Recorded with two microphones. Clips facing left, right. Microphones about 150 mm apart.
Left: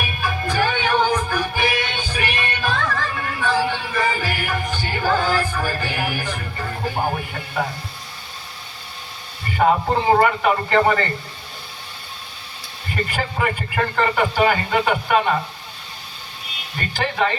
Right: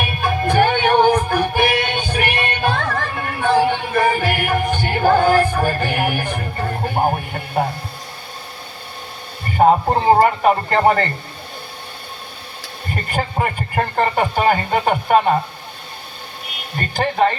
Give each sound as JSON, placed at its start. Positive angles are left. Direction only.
{"t": 0.0, "sound": "music", "side_deg": -55}
{"t": 6.4, "sound": "music", "side_deg": -40}
{"t": 6.8, "sound": "music", "side_deg": -50}
{"t": 9.6, "sound": "a man's voice", "side_deg": -40}
{"t": 12.9, "sound": "a man's voice", "side_deg": -45}
{"t": 16.7, "sound": "a man's voice", "side_deg": -40}